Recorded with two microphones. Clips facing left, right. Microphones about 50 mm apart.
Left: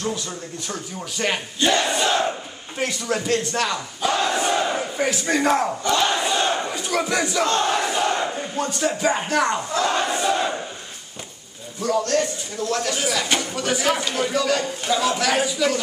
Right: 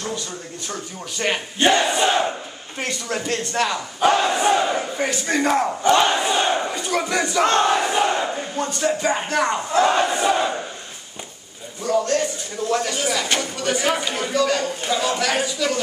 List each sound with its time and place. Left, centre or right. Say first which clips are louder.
0.7 s speech: right 1 dB; centre
1.6 s crowd: right 3 dB; right
2.8 s speech: left 2 dB; centre
4.2 s battle cry: right 3 dB; centre
6.0 s crowd: right 2 dB; right
6.7 s speech: even; centre
7.4 s crowd: right 6 dB; right
7.7 s crowd: right 2 dB; centre
8.5 s speech: right 1 dB; centre
9.8 s crowd: right 3 dB; centre
11.8 s speech: right 1 dB; centre